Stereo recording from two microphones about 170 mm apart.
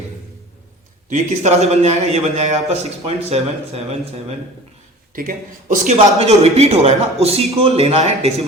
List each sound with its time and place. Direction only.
1.1 s a man's voice: 40° right (ahead or behind)
5.1 s a man's voice: 55° right (ahead or behind); by 8.4 s 35° right (ahead or behind)